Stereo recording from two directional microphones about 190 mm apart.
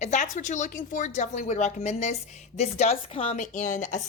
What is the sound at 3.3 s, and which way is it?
Speech, 40° left (ahead or behind).